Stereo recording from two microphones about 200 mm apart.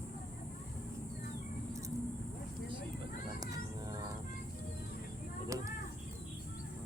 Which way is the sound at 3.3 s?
20° right (ahead or behind).